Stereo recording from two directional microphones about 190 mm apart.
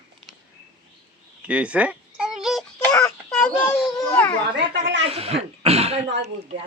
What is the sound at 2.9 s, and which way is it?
Child singing, 15° left (ahead or behind).